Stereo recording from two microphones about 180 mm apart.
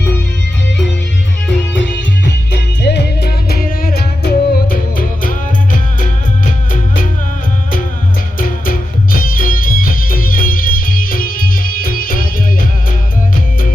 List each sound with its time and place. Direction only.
1.7 s music: 90° left
2.8 s music: 70° left (ahead or behind); by 5.4 s 50° left (ahead or behind)
8.4 s music: 50° left (ahead or behind)